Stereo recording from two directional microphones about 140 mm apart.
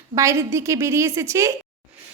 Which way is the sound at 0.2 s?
20° right (ahead or behind).